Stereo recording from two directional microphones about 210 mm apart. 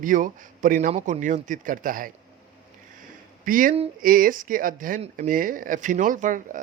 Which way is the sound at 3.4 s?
40° right (ahead or behind).